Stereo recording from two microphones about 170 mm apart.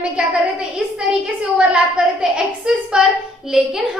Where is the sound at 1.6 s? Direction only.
5° right (ahead or behind).